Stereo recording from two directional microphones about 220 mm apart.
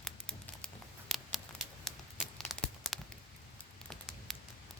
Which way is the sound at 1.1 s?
Centre (ahead or behind).